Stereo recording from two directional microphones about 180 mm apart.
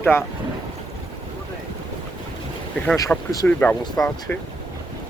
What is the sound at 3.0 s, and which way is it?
Speech, 20° left (ahead or behind).